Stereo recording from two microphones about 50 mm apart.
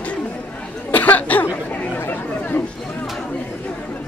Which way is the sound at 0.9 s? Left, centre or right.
Left.